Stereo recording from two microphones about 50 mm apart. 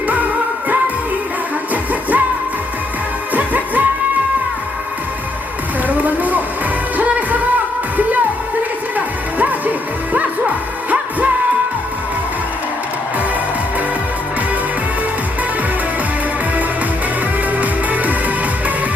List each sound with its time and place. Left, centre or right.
1.7 s music: right
3.3 s music: right
5.9 s music: right
9.0 s music: right
17.6 s music: right